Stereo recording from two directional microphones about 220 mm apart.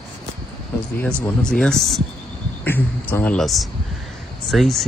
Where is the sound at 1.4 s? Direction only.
5° left (ahead or behind).